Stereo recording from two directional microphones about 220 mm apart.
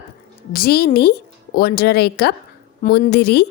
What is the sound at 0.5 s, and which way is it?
A woman's voice, 45° left (ahead or behind).